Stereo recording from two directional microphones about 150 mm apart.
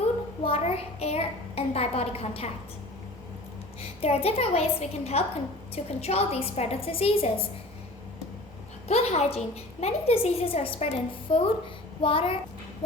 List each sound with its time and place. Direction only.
0.4 s a woman's voice: 40° left (ahead or behind)
3.8 s a woman's voice: 40° left (ahead or behind)
8.9 s a woman's voice: 45° left (ahead or behind)